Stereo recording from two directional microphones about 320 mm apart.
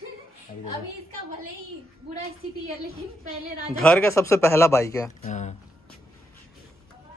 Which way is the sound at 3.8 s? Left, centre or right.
Centre.